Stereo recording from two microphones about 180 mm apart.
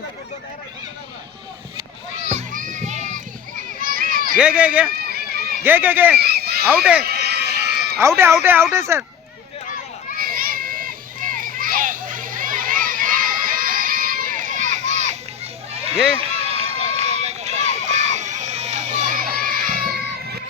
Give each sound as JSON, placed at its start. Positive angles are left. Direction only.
{"t": 2.3, "sound": "children playing", "side_deg": -45}
{"t": 3.8, "sound": "a sound", "side_deg": -50}
{"t": 4.4, "sound": "speech", "side_deg": -5}
{"t": 4.9, "sound": "run", "side_deg": -60}
{"t": 5.6, "sound": "speech", "side_deg": -10}
{"t": 6.1, "sound": "a sound", "side_deg": -60}
{"t": 6.7, "sound": "speech", "side_deg": -5}
{"t": 7.1, "sound": "run", "side_deg": -65}
{"t": 8.0, "sound": "speech", "side_deg": -15}
{"t": 10.2, "sound": "children playing", "side_deg": -50}
{"t": 15.7, "sound": "a sound", "side_deg": -35}
{"t": 16.1, "sound": "run", "side_deg": -35}